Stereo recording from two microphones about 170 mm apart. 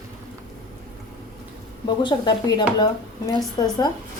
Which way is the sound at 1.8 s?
25° left (ahead or behind).